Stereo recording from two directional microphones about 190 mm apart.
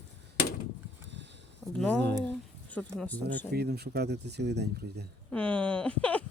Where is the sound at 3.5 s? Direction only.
55° right (ahead or behind).